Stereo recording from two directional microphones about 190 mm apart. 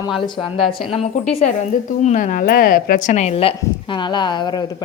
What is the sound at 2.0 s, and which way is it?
Speech, 40° left (ahead or behind).